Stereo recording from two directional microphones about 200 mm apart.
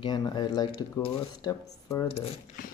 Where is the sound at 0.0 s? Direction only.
20° left (ahead or behind).